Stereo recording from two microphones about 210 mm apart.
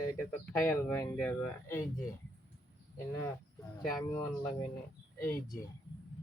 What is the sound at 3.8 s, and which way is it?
Speech, centre (ahead or behind).